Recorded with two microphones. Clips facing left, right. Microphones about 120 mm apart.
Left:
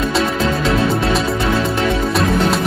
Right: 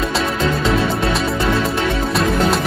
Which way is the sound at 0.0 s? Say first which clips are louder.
Left 2 dB; centre (ahead or behind).